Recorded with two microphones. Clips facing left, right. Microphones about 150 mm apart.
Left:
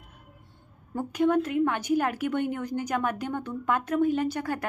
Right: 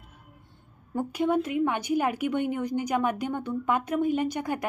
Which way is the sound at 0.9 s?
10° right (ahead or behind).